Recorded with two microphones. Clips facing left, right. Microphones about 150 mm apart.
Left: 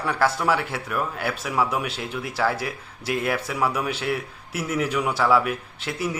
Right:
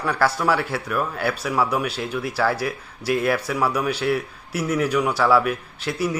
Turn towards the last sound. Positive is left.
turn(degrees=20)  # may be behind; listen again after turning